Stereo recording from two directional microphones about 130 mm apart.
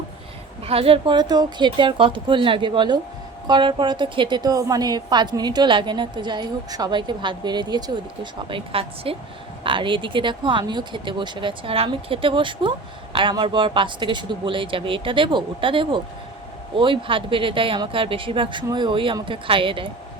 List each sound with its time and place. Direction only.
0.6 s a woman's voice: 50° right (ahead or behind)